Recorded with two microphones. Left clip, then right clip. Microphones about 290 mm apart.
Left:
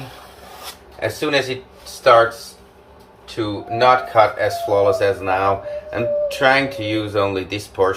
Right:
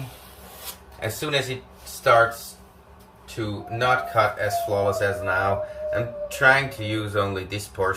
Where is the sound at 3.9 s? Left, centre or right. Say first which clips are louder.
Left 7 dB; centre.